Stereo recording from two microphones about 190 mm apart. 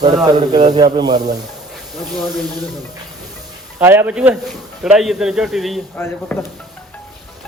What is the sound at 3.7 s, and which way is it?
A man's voice, 10° right (ahead or behind).